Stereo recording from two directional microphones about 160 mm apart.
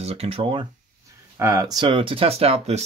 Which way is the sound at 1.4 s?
20° right (ahead or behind).